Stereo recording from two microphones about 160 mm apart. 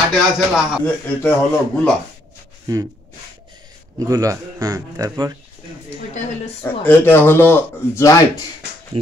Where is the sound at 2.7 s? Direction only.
20° right (ahead or behind).